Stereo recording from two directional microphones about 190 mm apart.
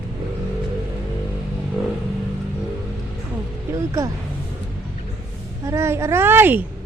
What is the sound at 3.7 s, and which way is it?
Speech, 15° right (ahead or behind).